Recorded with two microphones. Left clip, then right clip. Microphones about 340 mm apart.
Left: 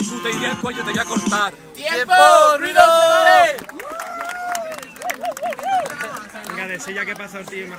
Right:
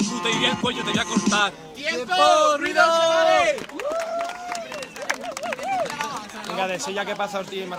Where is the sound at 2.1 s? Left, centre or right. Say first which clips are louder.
Left 7 dB; left.